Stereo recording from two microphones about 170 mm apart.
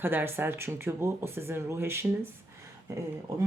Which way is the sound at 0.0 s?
10° right (ahead or behind).